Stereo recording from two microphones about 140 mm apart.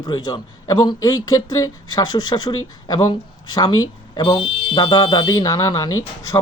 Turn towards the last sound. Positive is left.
turn(degrees=25)  # may be behind; listen again after turning